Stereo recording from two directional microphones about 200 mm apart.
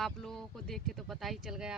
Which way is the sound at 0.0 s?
Centre (ahead or behind).